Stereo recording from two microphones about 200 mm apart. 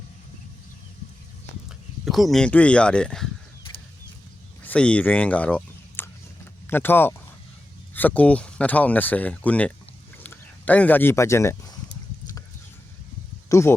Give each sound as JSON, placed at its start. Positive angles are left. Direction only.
{"t": 2.0, "sound": "speech", "side_deg": 0}
{"t": 4.6, "sound": "a sound", "side_deg": 5}
{"t": 7.9, "sound": "speech", "side_deg": 5}
{"t": 13.5, "sound": "speech", "side_deg": 15}